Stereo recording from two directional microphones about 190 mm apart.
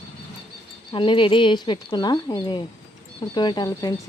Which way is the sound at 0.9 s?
25° left (ahead or behind).